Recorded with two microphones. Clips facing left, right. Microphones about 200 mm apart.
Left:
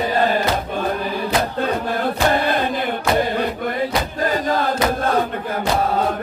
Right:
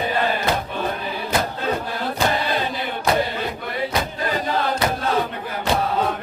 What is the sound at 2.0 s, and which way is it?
Chant, 50° left (ahead or behind).